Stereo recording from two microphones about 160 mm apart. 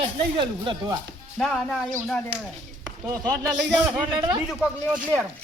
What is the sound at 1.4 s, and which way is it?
Speech, centre (ahead or behind).